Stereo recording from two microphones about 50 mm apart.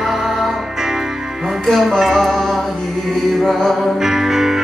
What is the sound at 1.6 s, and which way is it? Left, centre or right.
Speech, centre.